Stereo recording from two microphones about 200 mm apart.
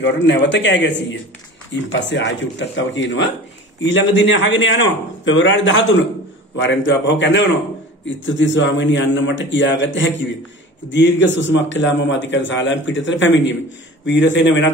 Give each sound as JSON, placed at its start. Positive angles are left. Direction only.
{"t": 0.0, "sound": "a man's voice", "side_deg": 65}